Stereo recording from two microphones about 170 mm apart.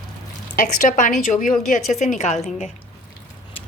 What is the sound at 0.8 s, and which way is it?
A woman's voice, 45° left (ahead or behind).